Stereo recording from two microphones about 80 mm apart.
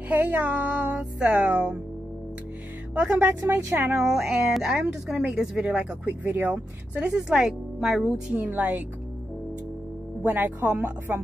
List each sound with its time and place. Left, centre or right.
0.1 s music: right
2.9 s music: centre
3.9 s speech: centre
5.8 s speech: centre
8.4 s music: right
10.2 s music: right